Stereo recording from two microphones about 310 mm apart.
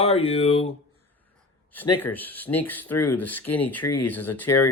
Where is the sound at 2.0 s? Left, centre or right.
Centre.